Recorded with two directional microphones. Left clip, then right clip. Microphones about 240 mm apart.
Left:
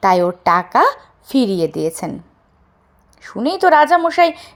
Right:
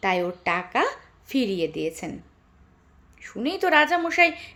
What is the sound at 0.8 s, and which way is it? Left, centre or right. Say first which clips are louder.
Speech: left 11 dB; left.